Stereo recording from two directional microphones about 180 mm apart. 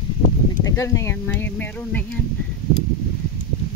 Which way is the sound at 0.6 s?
15° left (ahead or behind).